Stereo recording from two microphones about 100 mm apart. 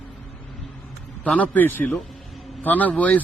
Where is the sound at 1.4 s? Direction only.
20° left (ahead or behind).